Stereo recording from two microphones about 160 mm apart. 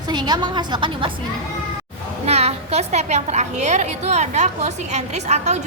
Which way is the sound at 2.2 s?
40° right (ahead or behind).